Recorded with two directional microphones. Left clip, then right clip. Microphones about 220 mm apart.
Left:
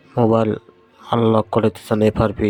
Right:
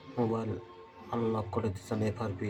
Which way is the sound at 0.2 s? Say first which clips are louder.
Left 17 dB; 45° left (ahead or behind).